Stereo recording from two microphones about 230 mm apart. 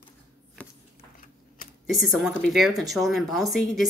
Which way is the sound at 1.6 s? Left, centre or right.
Left.